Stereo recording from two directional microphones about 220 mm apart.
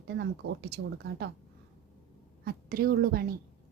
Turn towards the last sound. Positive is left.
turn(degrees=-40)  # may be behind; listen again after turning